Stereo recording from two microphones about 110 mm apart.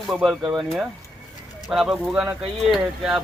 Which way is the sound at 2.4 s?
Centre (ahead or behind).